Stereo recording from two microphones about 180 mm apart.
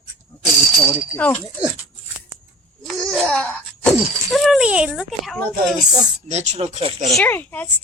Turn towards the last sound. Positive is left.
turn(degrees=10)  # may be behind; listen again after turning